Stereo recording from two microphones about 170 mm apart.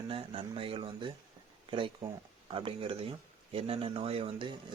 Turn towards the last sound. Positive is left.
turn(degrees=-30)  # may be behind; listen again after turning